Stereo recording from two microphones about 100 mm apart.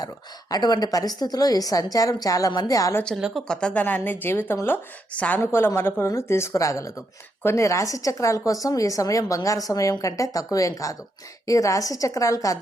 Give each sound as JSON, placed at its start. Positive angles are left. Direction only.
{"t": 0.5, "sound": "a woman's voice", "side_deg": 40}
{"t": 3.2, "sound": "speech", "side_deg": -5}
{"t": 3.4, "sound": "a woman's voice", "side_deg": 10}